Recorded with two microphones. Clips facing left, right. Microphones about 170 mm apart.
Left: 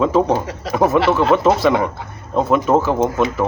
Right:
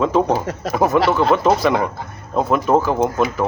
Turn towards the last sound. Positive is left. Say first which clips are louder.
# left 1 dB
turn(degrees=0)  # may be behind; listen again after turning